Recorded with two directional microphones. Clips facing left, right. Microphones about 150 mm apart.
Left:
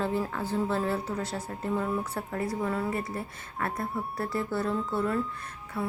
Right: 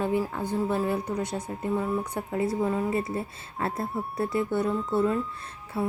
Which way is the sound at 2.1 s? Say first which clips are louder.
Right 4 dB; 20° right (ahead or behind).